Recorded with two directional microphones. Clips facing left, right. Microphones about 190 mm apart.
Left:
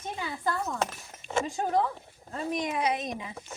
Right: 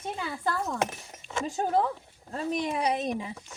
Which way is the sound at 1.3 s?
40° left (ahead or behind).